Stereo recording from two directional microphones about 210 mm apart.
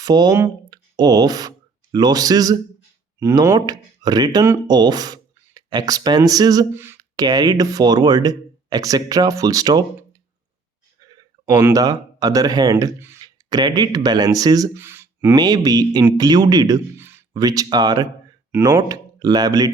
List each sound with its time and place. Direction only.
0.0 s speech: 20° right (ahead or behind)